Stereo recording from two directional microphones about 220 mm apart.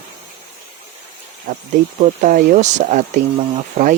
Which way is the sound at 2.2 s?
40° right (ahead or behind).